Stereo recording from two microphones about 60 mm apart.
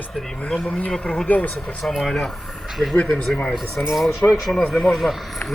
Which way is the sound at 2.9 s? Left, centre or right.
Left.